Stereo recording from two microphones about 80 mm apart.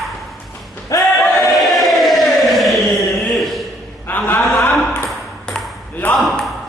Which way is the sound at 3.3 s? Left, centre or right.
Centre.